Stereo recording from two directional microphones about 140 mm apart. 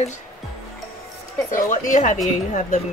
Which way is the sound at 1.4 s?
70° left (ahead or behind).